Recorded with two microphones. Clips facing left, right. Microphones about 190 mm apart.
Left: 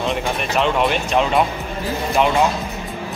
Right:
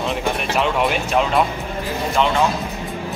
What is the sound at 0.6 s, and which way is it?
Speech, 5° right (ahead or behind).